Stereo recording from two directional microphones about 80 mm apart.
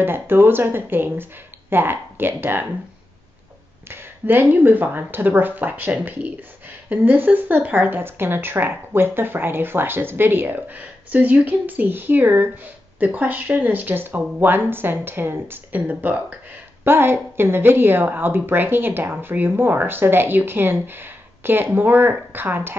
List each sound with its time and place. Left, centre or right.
0.0 s a woman's voice: right
3.9 s a woman's voice: right